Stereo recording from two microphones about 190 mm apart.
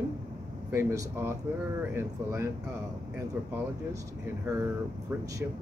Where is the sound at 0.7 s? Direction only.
15° right (ahead or behind).